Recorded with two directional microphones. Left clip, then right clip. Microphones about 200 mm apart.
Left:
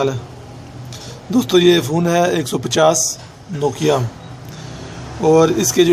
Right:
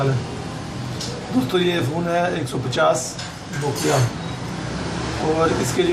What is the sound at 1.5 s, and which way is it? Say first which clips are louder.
A man's voice: left 9 dB; 65° left (ahead or behind).